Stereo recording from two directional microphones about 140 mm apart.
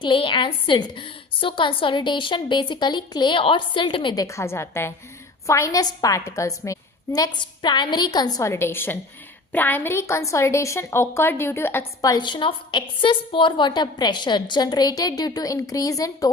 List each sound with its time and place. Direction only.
0.0 s a woman's voice: 35° left (ahead or behind); by 12.1 s 15° left (ahead or behind)
12.1 s a woman's voice: 35° left (ahead or behind)